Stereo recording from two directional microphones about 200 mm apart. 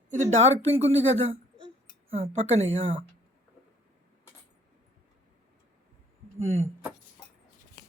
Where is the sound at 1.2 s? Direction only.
30° right (ahead or behind).